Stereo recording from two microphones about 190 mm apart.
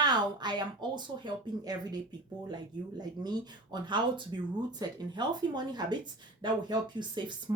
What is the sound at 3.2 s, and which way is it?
Speech, 20° right (ahead or behind).